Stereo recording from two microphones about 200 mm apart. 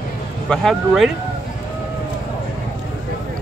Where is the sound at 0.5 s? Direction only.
Centre (ahead or behind).